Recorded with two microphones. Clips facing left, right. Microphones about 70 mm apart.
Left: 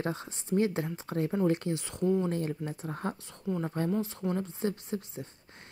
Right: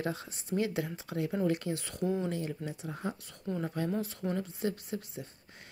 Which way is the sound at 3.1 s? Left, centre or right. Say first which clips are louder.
Left 2 dB; left.